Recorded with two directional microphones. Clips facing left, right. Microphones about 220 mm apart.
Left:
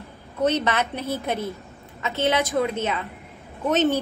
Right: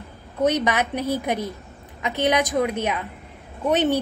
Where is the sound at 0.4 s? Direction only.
15° right (ahead or behind).